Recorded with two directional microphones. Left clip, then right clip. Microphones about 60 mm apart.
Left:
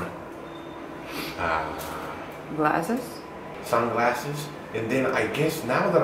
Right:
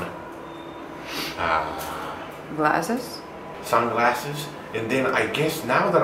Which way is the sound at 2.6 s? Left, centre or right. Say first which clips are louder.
Right 2 dB; centre.